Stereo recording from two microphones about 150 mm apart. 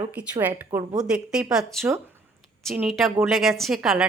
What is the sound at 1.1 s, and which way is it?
A woman's voice, 5° right (ahead or behind).